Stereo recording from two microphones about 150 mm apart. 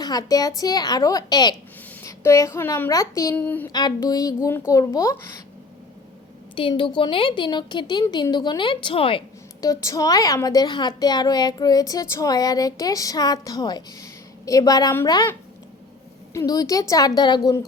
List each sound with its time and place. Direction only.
0.0 s a woman's voice: 25° left (ahead or behind)
3.3 s speech: 10° left (ahead or behind)
3.7 s a woman's voice: 30° left (ahead or behind)
6.6 s a woman's voice: 35° left (ahead or behind)
9.6 s a woman's voice: 25° left (ahead or behind)